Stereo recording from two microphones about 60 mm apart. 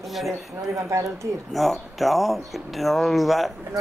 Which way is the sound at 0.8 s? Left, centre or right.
Right.